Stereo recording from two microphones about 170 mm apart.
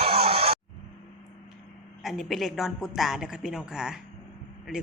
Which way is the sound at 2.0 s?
Centre (ahead or behind).